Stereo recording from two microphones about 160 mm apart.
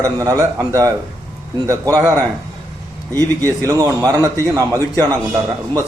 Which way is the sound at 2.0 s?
20° right (ahead or behind).